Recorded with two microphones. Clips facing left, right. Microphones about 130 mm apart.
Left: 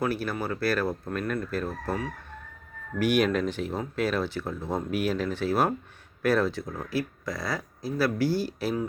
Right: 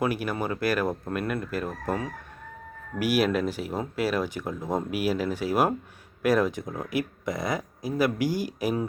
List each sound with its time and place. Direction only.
0.0 s speech: 15° right (ahead or behind)
3.0 s speech: 5° right (ahead or behind)